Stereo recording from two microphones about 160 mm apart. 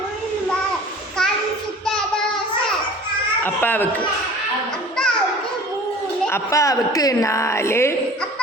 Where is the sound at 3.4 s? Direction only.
10° left (ahead or behind).